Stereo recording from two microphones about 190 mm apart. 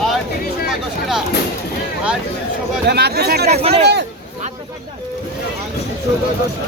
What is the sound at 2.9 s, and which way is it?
Speech, 55° right (ahead or behind).